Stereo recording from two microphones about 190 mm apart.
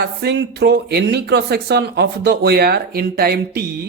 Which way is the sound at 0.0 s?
60° right (ahead or behind).